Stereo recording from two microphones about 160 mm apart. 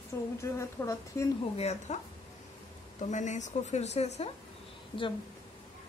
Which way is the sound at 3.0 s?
50° left (ahead or behind).